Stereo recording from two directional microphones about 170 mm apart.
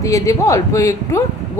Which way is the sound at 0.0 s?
20° left (ahead or behind).